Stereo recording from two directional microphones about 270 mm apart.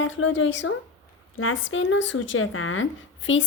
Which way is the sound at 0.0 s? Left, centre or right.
Left.